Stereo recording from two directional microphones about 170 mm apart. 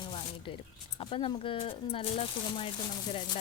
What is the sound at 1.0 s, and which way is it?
Speech, 30° left (ahead or behind).